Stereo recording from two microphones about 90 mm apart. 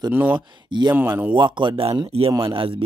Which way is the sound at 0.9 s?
20° right (ahead or behind).